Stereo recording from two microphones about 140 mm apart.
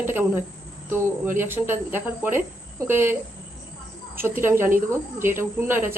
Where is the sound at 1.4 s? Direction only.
15° right (ahead or behind).